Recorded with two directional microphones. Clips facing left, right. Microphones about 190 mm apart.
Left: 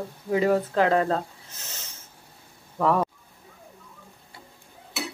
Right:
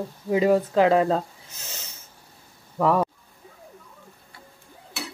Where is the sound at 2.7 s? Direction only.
5° right (ahead or behind).